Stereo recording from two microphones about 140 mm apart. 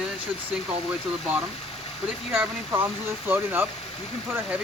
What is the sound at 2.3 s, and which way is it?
Speech, 15° right (ahead or behind).